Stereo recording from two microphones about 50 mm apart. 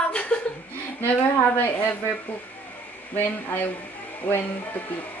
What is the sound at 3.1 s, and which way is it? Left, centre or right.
Speech, left.